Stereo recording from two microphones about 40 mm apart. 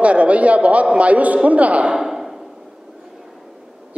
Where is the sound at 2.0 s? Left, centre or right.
Centre.